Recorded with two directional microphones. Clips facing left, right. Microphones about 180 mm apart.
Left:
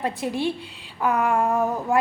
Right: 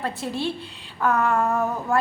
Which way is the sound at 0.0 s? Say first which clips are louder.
Left 2 dB; 15° left (ahead or behind).